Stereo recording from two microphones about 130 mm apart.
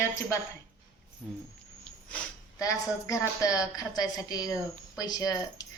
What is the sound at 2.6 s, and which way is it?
A woman's voice, 25° left (ahead or behind).